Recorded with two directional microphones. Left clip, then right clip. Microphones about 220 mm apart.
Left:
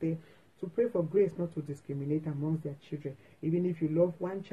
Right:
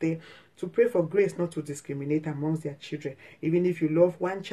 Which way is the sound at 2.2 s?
20° right (ahead or behind).